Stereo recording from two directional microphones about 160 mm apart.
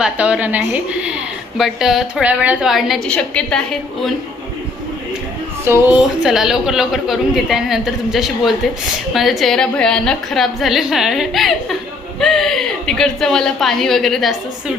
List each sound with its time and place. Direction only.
0.0 s a woman's voice: 10° right (ahead or behind)
5.6 s a woman's voice: 15° right (ahead or behind)
6.0 s a woman's voice: 5° right (ahead or behind)